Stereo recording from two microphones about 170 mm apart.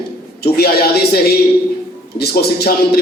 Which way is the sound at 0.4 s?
70° left (ahead or behind).